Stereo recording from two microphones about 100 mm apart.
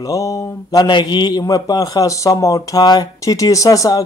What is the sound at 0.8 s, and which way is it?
A man's voice, 50° left (ahead or behind).